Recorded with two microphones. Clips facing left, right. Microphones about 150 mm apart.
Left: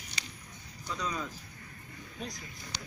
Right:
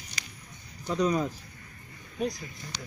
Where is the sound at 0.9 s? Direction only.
45° right (ahead or behind).